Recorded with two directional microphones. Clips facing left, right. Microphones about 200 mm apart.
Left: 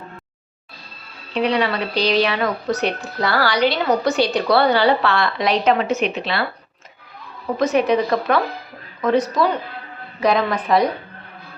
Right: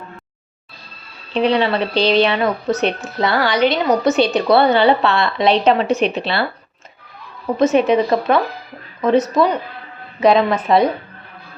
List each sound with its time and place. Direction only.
1.3 s speech: 30° right (ahead or behind)
7.5 s speech: 25° right (ahead or behind)